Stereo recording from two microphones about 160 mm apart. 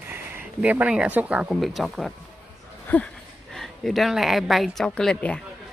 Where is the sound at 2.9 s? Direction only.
10° left (ahead or behind).